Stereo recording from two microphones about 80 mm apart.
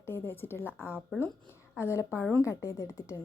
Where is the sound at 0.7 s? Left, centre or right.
Centre.